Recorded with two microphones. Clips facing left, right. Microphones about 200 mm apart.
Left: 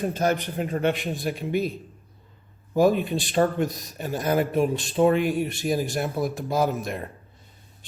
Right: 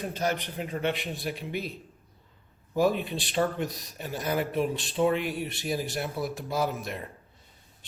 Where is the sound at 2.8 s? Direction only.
45° left (ahead or behind).